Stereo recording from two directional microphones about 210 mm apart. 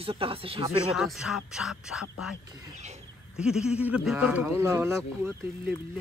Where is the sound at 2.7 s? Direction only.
35° right (ahead or behind).